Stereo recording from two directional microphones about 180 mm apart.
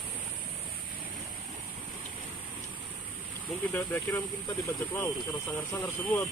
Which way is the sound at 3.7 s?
10° left (ahead or behind).